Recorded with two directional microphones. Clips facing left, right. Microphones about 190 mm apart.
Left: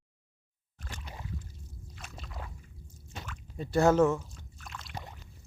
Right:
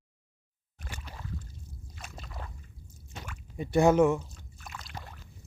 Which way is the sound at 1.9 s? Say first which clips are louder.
Right 1 dB; centre (ahead or behind).